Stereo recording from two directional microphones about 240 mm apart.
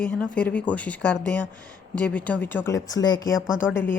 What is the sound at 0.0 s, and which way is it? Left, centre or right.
Speech, centre.